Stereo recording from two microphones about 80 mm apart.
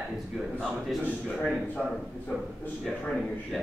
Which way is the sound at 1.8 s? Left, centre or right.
Centre.